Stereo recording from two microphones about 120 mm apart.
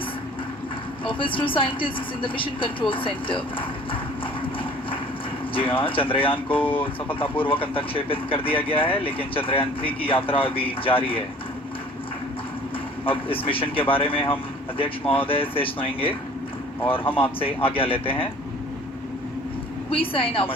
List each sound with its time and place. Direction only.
1.0 s speech: 45° left (ahead or behind)
5.5 s speech: 50° left (ahead or behind)
6.6 s speech: 15° left (ahead or behind)
7.2 s speech: 50° left (ahead or behind)
13.1 s speech: 50° left (ahead or behind)
17.2 s speech: 50° left (ahead or behind)
19.9 s speech: 50° left (ahead or behind)